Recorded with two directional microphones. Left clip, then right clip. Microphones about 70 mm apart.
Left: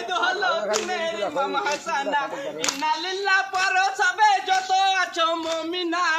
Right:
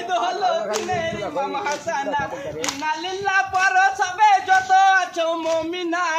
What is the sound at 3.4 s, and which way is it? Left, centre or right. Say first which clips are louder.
Speech: right 6 dB; right.